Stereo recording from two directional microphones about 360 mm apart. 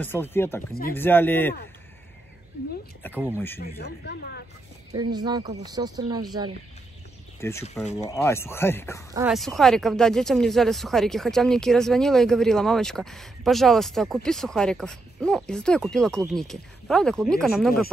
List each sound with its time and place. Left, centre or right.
0.0 s speech: centre
3.3 s speech: centre
3.6 s speech: left
5.1 s speech: centre
7.3 s speech: centre